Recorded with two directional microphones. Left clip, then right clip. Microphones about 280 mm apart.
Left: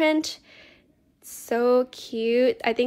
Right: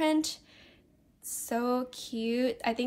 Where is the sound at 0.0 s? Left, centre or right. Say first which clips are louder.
Left 6 dB; left.